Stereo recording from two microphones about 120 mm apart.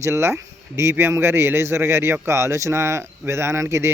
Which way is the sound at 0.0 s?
20° right (ahead or behind).